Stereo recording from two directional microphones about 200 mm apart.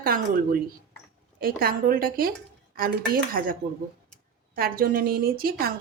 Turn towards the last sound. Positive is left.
turn(degrees=-45)  # may be behind; listen again after turning